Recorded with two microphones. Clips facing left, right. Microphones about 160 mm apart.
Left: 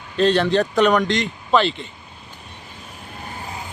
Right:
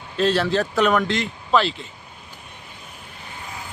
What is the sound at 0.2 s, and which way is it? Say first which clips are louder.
Speech: left 3 dB; 5° right (ahead or behind).